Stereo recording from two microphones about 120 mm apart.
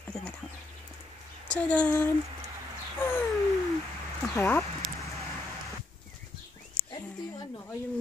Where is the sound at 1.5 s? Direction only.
10° left (ahead or behind).